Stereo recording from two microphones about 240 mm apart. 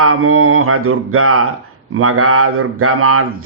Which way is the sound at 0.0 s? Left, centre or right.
Right.